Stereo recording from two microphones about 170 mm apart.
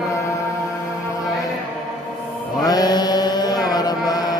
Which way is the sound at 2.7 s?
25° left (ahead or behind).